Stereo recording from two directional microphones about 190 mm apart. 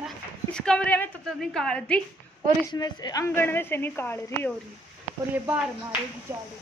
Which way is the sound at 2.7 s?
20° left (ahead or behind).